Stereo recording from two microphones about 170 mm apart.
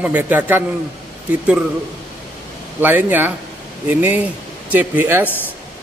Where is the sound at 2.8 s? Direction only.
10° right (ahead or behind).